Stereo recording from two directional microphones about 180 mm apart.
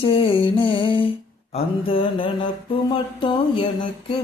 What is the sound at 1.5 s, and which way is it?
Mantra, 30° left (ahead or behind).